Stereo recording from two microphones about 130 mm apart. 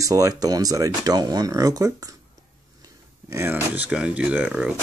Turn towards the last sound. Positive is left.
turn(degrees=-10)  # may be behind; listen again after turning